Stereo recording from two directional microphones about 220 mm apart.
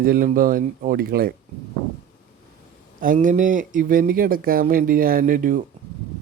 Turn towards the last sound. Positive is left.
turn(degrees=-40)  # may be behind; listen again after turning